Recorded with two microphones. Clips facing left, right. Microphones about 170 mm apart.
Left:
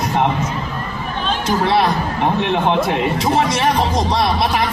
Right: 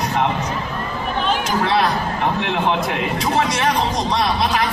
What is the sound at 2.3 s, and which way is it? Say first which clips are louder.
Speech: left 4 dB; 30° left (ahead or behind).